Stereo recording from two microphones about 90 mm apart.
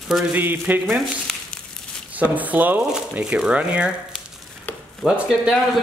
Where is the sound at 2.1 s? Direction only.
15° right (ahead or behind).